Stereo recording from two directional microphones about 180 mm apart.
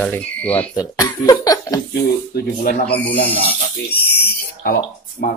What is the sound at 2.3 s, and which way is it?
Speech, 60° left (ahead or behind).